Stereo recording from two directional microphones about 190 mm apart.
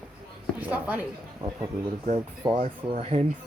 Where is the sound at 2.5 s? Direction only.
40° right (ahead or behind).